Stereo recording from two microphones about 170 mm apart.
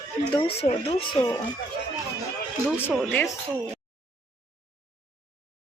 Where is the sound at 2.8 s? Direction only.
10° left (ahead or behind).